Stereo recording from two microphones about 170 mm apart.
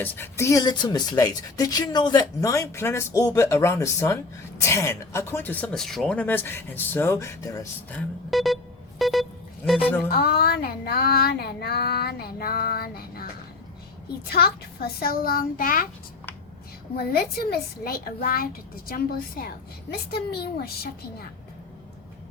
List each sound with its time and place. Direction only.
0.0 s speech: 10° left (ahead or behind)
7.9 s speech: centre (ahead or behind)
9.0 s a sound: centre (ahead or behind)
9.6 s speech: 5° right (ahead or behind)
10.1 s child singing: 65° left (ahead or behind)
14.3 s child singing: 65° left (ahead or behind)
17.1 s child singing: 65° left (ahead or behind)
18.9 s a woman's voice: 60° left (ahead or behind)